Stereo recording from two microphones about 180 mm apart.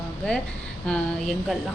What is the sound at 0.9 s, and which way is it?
Speech, 5° left (ahead or behind).